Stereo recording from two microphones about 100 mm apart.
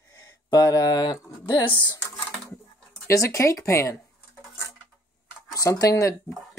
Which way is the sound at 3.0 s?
30° left (ahead or behind).